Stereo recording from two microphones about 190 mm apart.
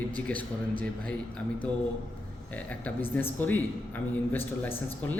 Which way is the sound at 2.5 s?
5° left (ahead or behind).